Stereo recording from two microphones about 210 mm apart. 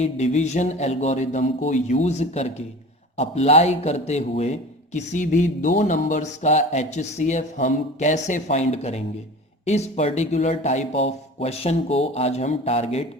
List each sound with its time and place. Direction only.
0.0 s speech: 35° left (ahead or behind)